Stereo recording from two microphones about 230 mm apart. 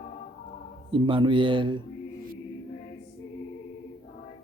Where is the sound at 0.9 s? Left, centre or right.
Right.